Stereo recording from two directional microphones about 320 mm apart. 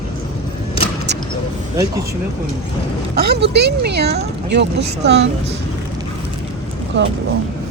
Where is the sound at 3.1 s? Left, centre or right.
Right.